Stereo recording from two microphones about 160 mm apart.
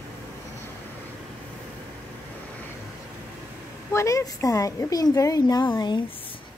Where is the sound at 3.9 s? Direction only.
20° left (ahead or behind).